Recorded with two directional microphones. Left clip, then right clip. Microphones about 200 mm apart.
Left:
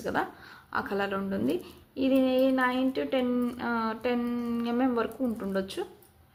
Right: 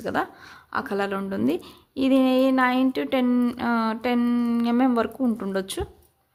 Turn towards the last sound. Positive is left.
turn(degrees=-35)  # may be behind; listen again after turning